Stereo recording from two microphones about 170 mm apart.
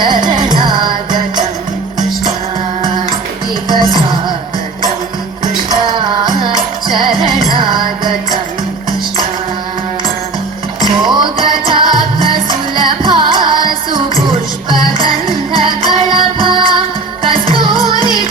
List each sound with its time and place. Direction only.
0.0 s music: 25° right (ahead or behind)
5.8 s music: 25° right (ahead or behind)
10.8 s music: 25° right (ahead or behind)